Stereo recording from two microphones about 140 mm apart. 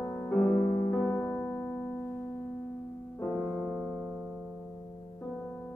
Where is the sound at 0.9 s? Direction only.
15° left (ahead or behind).